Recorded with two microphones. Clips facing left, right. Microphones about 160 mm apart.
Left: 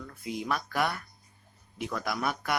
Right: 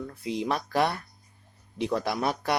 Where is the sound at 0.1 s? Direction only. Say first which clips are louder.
Right 2 dB; 30° right (ahead or behind).